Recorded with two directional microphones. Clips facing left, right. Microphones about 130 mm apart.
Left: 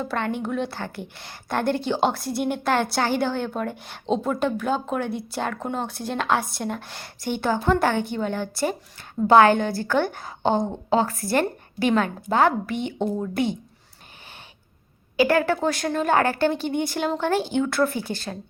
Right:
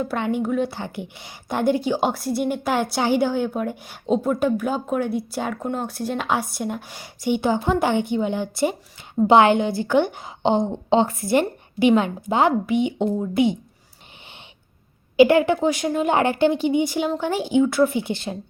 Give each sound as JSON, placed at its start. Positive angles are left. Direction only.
{"t": 0.0, "sound": "a woman's voice", "side_deg": -10}
{"t": 15.1, "sound": "a woman's voice", "side_deg": -20}